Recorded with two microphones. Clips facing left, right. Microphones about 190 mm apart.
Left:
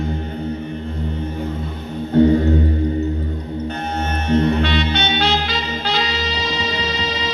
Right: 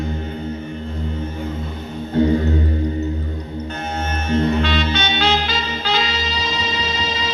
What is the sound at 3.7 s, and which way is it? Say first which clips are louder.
Music: even; 60° left (ahead or behind).